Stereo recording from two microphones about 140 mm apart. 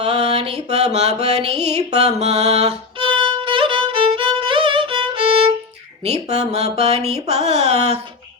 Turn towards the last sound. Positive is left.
turn(degrees=-50)  # may be behind; listen again after turning